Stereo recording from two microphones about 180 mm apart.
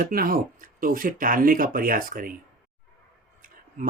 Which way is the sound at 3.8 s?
45° right (ahead or behind).